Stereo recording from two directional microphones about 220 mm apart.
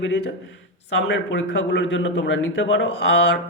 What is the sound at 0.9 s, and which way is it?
Speech, 50° left (ahead or behind).